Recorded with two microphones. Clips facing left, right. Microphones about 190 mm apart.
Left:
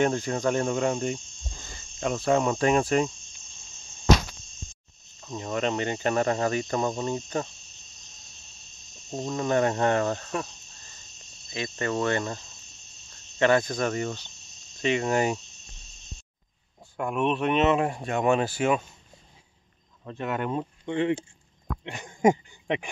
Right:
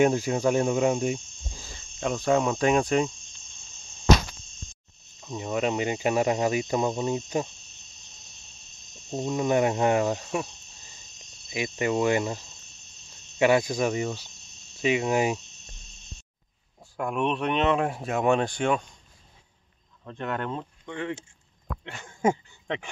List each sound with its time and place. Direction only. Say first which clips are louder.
0.0 s speech: right 3 dB; 10° right (ahead or behind)
5.2 s cricket: right 1 dB; 5° right (ahead or behind)
9.1 s cricket: right 1 dB; 10° right (ahead or behind)
16.9 s speech: left 1 dB; centre (ahead or behind)
20.1 s speech: left 2 dB; 5° left (ahead or behind)
20.8 s speech: left 10 dB; 20° left (ahead or behind)
21.8 s a sound: left 3 dB; 15° left (ahead or behind)